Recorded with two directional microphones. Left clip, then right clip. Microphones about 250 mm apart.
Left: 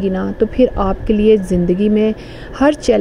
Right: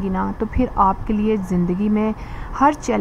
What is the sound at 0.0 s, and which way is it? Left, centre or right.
A woman's voice, centre.